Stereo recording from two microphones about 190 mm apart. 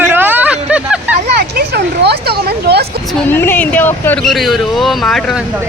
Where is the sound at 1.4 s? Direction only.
55° right (ahead or behind).